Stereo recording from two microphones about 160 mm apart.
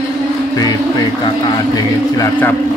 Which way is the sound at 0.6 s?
25° left (ahead or behind).